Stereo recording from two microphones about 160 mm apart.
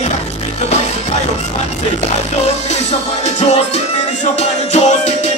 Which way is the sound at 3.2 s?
40° left (ahead or behind).